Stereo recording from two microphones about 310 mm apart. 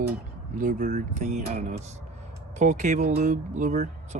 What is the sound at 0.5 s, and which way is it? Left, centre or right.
Speech, right.